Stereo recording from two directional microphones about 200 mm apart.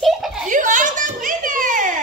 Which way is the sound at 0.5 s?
40° right (ahead or behind).